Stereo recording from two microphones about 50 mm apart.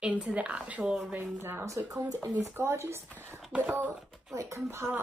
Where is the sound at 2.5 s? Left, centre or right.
Right.